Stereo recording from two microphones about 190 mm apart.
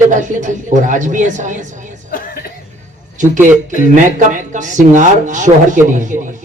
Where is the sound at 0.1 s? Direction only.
40° right (ahead or behind).